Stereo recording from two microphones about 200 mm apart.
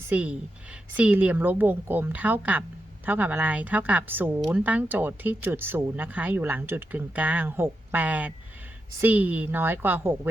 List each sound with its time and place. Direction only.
0.1 s speech: 5° right (ahead or behind)